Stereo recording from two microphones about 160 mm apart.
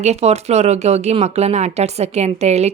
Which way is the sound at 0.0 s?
40° right (ahead or behind).